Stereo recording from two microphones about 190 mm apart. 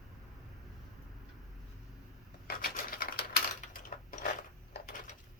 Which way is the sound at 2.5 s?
50° left (ahead or behind).